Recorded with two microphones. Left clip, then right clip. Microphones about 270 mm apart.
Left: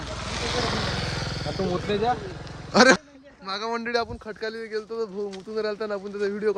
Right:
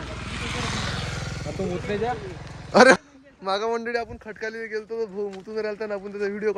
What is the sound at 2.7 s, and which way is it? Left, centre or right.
A man's voice, centre.